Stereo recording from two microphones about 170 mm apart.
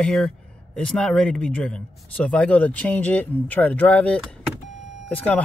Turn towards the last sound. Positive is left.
turn(degrees=10)  # may be behind; listen again after turning